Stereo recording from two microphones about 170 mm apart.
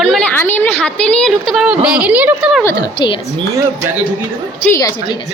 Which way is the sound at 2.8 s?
30° left (ahead or behind).